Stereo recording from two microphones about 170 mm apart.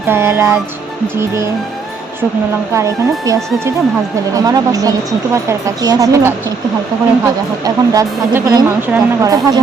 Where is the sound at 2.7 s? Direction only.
20° right (ahead or behind).